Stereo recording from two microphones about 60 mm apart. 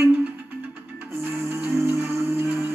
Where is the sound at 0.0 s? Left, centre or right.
Right.